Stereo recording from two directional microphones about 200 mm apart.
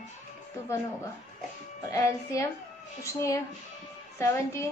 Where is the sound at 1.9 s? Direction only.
15° left (ahead or behind).